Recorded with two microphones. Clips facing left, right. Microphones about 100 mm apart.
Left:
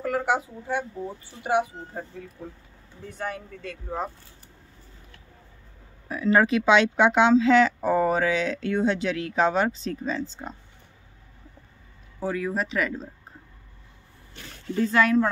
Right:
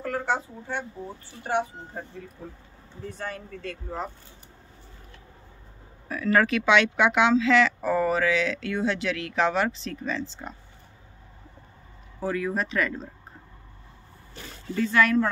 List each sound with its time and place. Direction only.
0.0 s speech: 10° left (ahead or behind)
6.0 s speech: 20° left (ahead or behind)
12.3 s speech: 10° left (ahead or behind)
14.3 s a sound: centre (ahead or behind)
14.8 s speech: 20° left (ahead or behind)